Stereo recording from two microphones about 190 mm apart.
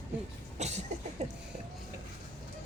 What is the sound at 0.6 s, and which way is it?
Cough, 35° right (ahead or behind).